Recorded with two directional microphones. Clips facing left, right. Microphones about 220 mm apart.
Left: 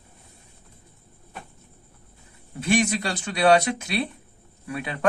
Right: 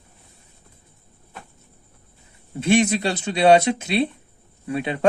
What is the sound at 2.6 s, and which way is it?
Speech, 25° right (ahead or behind).